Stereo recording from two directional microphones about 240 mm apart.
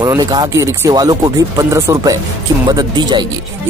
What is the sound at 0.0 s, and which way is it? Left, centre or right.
Speech, centre.